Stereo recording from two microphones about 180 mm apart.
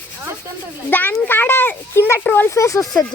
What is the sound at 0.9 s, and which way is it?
Speech, 10° left (ahead or behind).